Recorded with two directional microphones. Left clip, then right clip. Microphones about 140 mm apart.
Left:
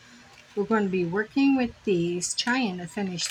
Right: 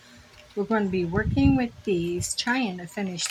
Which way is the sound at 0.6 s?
5° right (ahead or behind).